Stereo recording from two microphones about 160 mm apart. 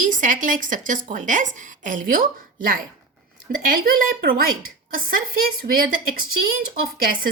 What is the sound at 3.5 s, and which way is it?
A woman's voice, 60° right (ahead or behind).